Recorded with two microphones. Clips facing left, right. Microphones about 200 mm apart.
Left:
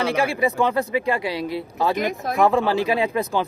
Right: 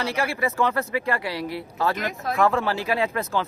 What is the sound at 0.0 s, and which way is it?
Speech, 15° left (ahead or behind).